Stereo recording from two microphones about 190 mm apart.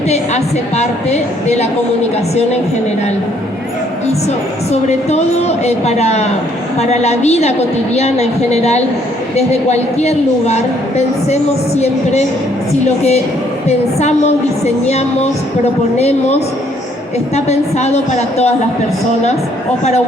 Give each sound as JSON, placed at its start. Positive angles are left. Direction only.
{"t": 0.1, "sound": "a woman's voice", "side_deg": 35}
{"t": 4.7, "sound": "a woman's voice", "side_deg": 35}
{"t": 14.6, "sound": "a woman's voice", "side_deg": 35}
{"t": 17.3, "sound": "a woman's voice", "side_deg": 35}